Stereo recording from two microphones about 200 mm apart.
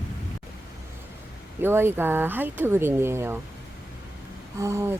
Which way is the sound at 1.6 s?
10° right (ahead or behind).